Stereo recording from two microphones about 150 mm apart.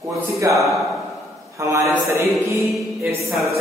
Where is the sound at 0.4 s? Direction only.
20° right (ahead or behind).